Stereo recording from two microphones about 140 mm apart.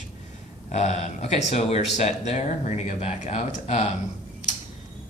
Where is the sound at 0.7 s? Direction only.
55° left (ahead or behind).